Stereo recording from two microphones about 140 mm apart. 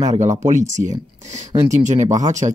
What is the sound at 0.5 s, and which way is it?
Speech, 60° right (ahead or behind).